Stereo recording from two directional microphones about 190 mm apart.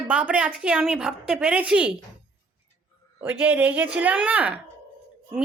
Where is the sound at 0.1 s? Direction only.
5° right (ahead or behind).